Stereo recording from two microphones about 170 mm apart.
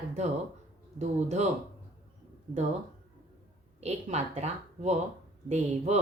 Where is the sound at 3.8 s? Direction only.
40° right (ahead or behind).